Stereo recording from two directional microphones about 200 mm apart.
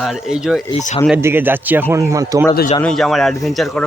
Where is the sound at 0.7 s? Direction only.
35° left (ahead or behind).